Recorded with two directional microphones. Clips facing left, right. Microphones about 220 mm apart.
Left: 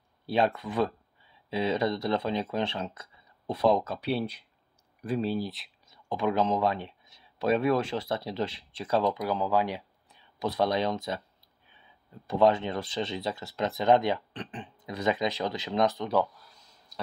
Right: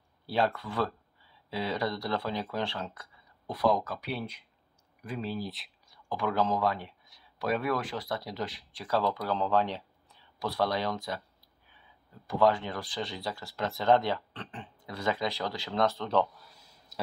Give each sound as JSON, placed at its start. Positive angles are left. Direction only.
{"t": 0.3, "sound": "speech", "side_deg": 20}
{"t": 5.4, "sound": "speech", "side_deg": 0}
{"t": 5.9, "sound": "speech", "side_deg": 20}
{"t": 12.3, "sound": "speech", "side_deg": 25}
{"t": 16.9, "sound": "a sound", "side_deg": 0}